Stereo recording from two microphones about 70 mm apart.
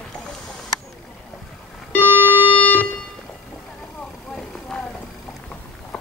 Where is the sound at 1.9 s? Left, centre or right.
Left.